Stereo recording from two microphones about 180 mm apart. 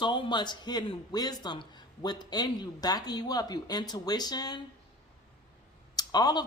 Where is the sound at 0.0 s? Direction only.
25° left (ahead or behind).